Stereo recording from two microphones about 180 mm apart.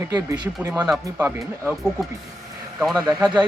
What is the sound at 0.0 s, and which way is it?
Speech, 20° right (ahead or behind).